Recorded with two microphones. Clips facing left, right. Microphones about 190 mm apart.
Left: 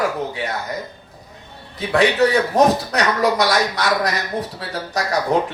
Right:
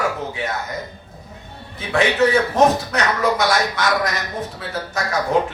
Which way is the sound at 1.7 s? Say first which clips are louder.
Left 2 dB; 35° left (ahead or behind).